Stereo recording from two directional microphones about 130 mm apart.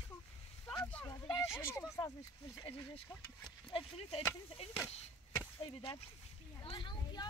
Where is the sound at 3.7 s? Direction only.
55° left (ahead or behind).